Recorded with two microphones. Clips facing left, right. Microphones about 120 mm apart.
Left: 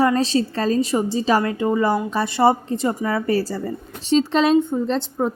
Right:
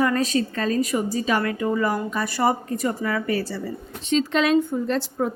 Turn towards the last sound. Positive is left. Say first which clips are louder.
# left 2 dB
turn(degrees=25)  # may be behind; listen again after turning